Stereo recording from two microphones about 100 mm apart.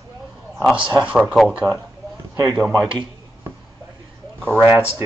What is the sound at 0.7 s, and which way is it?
Speech, 10° right (ahead or behind).